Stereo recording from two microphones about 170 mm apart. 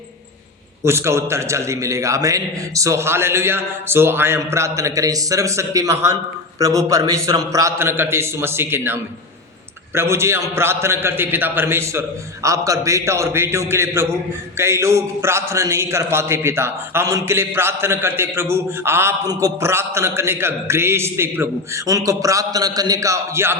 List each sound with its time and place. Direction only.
0.9 s a man's voice: 15° right (ahead or behind)